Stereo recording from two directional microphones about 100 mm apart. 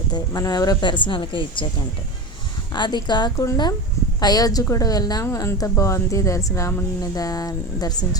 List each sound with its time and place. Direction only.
0.1 s speech: 40° left (ahead or behind); by 1.6 s 55° left (ahead or behind)
2.7 s speech: 45° left (ahead or behind)
3.3 s speech: 30° left (ahead or behind)
5.2 s speech: 30° left (ahead or behind)